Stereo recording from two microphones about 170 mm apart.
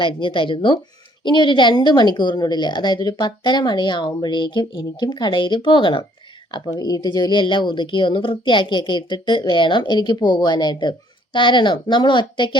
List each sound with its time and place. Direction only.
0.0 s a woman's voice: 30° left (ahead or behind)